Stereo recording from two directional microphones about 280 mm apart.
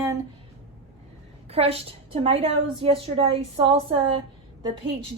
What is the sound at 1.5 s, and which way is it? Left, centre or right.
A woman's voice, right.